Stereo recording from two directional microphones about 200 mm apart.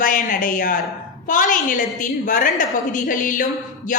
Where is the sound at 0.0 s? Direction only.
40° left (ahead or behind).